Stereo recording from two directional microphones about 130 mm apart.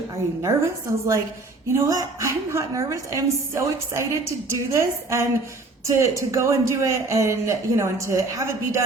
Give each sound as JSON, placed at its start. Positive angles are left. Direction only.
{"t": 0.4, "sound": "a woman's voice", "side_deg": -25}